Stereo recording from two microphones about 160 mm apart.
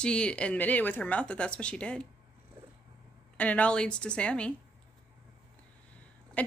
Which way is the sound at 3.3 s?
10° left (ahead or behind).